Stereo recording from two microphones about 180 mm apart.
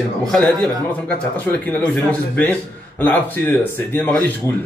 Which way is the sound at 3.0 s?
10° left (ahead or behind).